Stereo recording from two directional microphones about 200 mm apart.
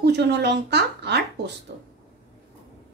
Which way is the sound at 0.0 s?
55° right (ahead or behind).